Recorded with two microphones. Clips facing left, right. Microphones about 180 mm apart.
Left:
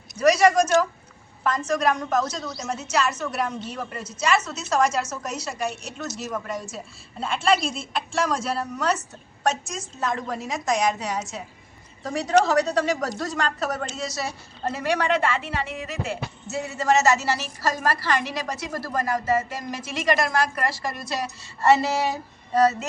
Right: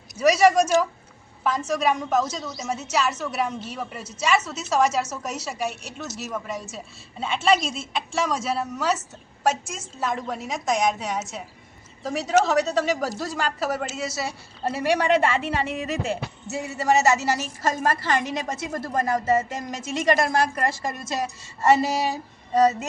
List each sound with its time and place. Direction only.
0.2 s a woman's voice: centre (ahead or behind); by 22.9 s 20° right (ahead or behind)